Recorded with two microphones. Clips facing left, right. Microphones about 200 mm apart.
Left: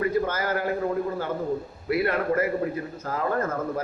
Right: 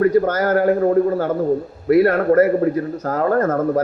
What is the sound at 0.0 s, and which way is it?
A man's voice, 45° right (ahead or behind).